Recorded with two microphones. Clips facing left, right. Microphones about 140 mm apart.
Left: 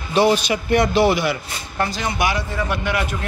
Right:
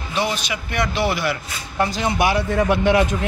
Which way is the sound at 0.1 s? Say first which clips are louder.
Left 7 dB; 40° left (ahead or behind).